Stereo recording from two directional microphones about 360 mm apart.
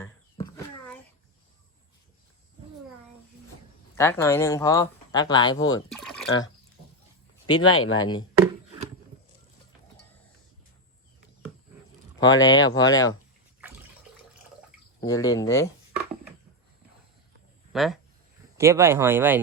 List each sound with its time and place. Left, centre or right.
0.0 s a sound: centre
3.9 s speech: centre
5.6 s a sound: centre
7.4 s speech: centre
7.7 s speech: left
12.2 s speech: left
12.5 s speech: centre
15.0 s speech: centre
17.7 s speech: centre